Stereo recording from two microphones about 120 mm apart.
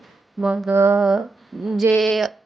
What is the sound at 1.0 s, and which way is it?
A woman's voice, 5° right (ahead or behind).